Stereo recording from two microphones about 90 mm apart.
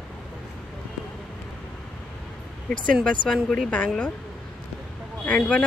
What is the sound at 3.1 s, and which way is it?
Speech, 10° left (ahead or behind).